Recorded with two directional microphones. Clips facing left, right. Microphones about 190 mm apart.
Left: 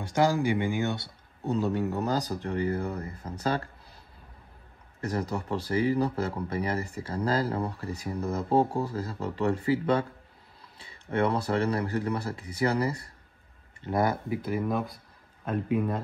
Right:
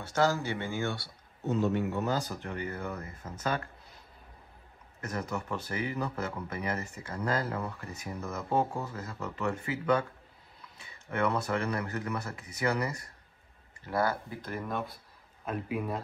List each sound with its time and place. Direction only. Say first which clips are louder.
0.0 s speech: left 4 dB; 15° left (ahead or behind)
1.5 s a man's voice: left 1 dB; 40° left (ahead or behind)
5.0 s a man's voice: left 5 dB; 30° left (ahead or behind); by 16.0 s 5° right (ahead or behind)